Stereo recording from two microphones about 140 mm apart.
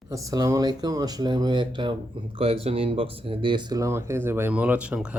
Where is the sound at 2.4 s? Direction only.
45° right (ahead or behind).